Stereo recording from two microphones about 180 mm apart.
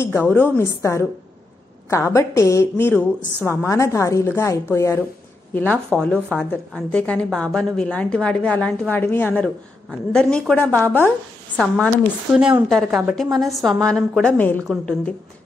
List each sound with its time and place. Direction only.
0.0 s a woman's voice: 10° left (ahead or behind)
1.9 s a woman's voice: 15° left (ahead or behind)
12.4 s a woman's voice: 5° right (ahead or behind)